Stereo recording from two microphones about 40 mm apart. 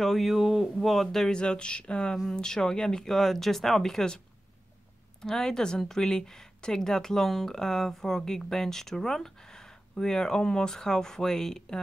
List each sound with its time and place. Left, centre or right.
0.0 s speech: centre
0.4 s speech: centre
0.7 s speech: centre
1.3 s speech: left
5.2 s speech: centre